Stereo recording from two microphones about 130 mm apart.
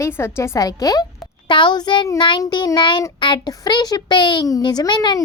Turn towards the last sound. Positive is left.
turn(degrees=35)  # may be behind; listen again after turning